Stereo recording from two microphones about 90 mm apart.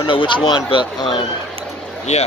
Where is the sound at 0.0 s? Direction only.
65° left (ahead or behind).